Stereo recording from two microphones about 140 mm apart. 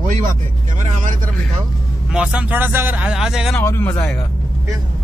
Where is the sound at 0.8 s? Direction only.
65° right (ahead or behind).